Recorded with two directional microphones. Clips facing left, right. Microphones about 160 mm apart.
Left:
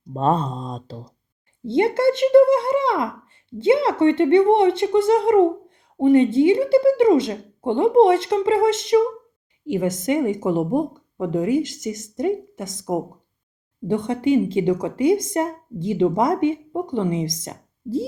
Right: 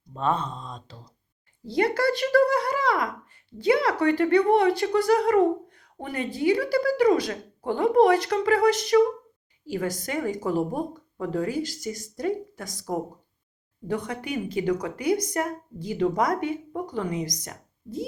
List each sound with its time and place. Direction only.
0.1 s speech: 35° left (ahead or behind)
1.6 s speech: 25° left (ahead or behind)